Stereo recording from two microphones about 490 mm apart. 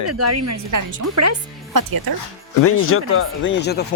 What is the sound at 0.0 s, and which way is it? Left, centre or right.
Speech, right.